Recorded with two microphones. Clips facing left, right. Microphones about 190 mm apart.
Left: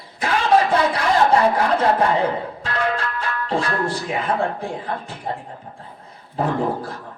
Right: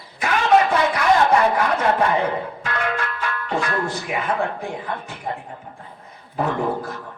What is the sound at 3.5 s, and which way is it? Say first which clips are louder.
Speech: left 1 dB; 30° left (ahead or behind).